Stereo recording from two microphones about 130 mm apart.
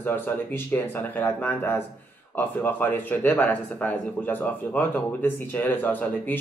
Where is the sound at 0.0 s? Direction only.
15° left (ahead or behind).